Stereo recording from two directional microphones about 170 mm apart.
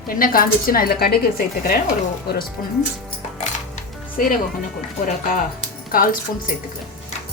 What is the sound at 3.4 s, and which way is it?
Music, 45° left (ahead or behind).